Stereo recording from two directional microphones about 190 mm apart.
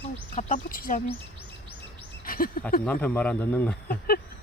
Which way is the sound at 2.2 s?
50° left (ahead or behind).